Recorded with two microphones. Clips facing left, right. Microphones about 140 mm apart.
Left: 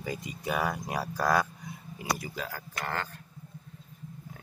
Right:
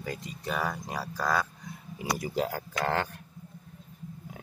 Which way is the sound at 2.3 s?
65° right (ahead or behind).